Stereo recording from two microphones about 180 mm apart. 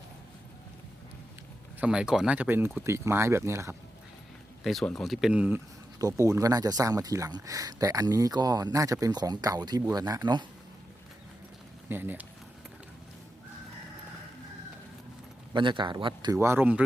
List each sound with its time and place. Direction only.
1.8 s speech: 5° right (ahead or behind)
4.6 s speech: centre (ahead or behind)
6.0 s speech: 20° right (ahead or behind)
11.9 s speech: 10° right (ahead or behind)
15.5 s speech: 25° right (ahead or behind); by 16.8 s 10° right (ahead or behind)